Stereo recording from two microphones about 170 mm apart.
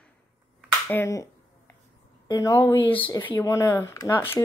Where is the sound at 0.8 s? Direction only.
15° left (ahead or behind).